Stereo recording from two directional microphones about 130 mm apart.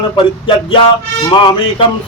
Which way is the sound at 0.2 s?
40° left (ahead or behind).